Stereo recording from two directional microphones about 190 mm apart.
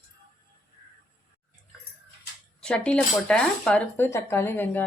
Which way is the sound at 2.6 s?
5° left (ahead or behind).